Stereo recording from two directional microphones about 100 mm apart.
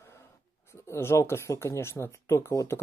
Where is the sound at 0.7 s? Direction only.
25° left (ahead or behind).